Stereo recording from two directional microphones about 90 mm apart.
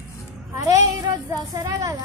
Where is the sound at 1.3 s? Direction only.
40° right (ahead or behind).